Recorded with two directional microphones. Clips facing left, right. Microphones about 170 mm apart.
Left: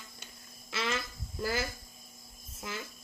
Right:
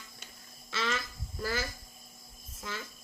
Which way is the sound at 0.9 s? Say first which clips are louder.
Left 1 dB; 25° left (ahead or behind).